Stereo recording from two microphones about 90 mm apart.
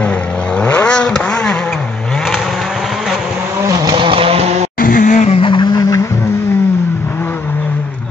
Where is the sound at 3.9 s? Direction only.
80° right.